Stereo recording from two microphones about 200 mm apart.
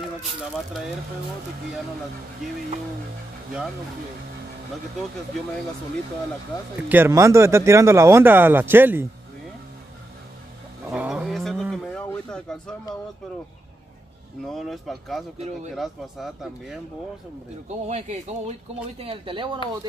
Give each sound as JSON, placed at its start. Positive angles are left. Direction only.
{"t": 6.9, "sound": "speech", "side_deg": -10}
{"t": 10.9, "sound": "a sound", "side_deg": -5}
{"t": 14.4, "sound": "speech", "side_deg": 0}
{"t": 15.3, "sound": "speech", "side_deg": -35}
{"t": 15.7, "sound": "speech", "side_deg": 0}
{"t": 17.8, "sound": "speech", "side_deg": -35}